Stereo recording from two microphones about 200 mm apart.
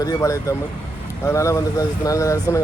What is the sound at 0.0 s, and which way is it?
Speech, 15° left (ahead or behind).